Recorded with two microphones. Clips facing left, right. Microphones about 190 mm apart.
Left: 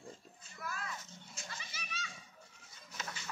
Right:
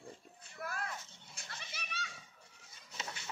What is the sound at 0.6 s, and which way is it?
Children playing, 60° right (ahead or behind).